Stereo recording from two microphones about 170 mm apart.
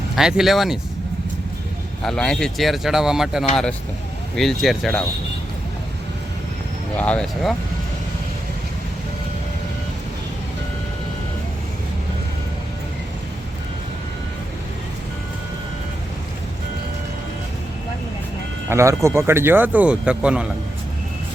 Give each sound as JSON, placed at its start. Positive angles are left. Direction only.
{"t": 0.2, "sound": "speech", "side_deg": -5}
{"t": 2.0, "sound": "speech", "side_deg": 5}
{"t": 6.9, "sound": "speech", "side_deg": 10}
{"t": 18.7, "sound": "speech", "side_deg": -15}